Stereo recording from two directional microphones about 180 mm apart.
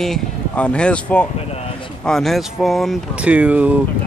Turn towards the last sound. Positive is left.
turn(degrees=-10)  # may be behind; listen again after turning